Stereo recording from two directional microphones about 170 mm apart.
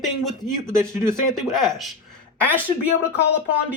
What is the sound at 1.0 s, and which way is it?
Speech, centre (ahead or behind).